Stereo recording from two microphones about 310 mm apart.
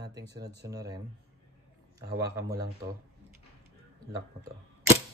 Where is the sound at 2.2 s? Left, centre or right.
Centre.